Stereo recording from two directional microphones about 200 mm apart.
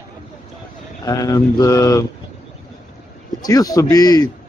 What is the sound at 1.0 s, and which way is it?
Speech, 20° left (ahead or behind).